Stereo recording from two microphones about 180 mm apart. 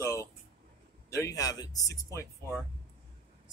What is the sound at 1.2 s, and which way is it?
Speech, 20° left (ahead or behind).